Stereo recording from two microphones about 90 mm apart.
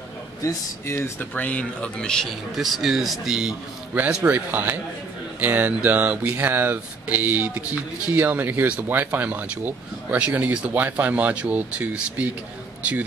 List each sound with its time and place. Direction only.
0.4 s speech: 35° left (ahead or behind)
1.3 s speech: 15° left (ahead or behind)
2.5 s speech: 5° right (ahead or behind)
4.2 s speech: 20° right (ahead or behind)